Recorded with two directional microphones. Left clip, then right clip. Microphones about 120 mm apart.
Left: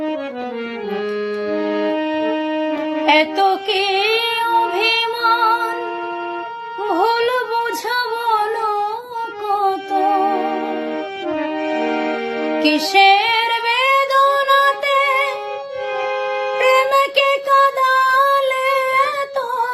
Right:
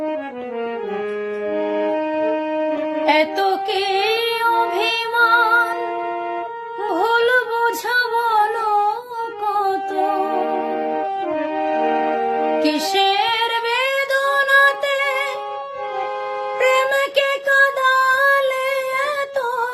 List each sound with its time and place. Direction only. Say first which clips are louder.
1.5 s wind instrument: even; 30° left (ahead or behind)
3.1 s a sound: left 3 dB; 20° right (ahead or behind)
4.8 s female singing: even; 30° right (ahead or behind)
6.8 s a sound: left 1 dB; 25° right (ahead or behind)
10.2 s music: left 2 dB; 35° left (ahead or behind)
11.6 s music: right 3 dB; 30° left (ahead or behind)
12.9 s female singing: left 7 dB; 25° right (ahead or behind)
16.6 s music: left 2 dB; 30° right (ahead or behind)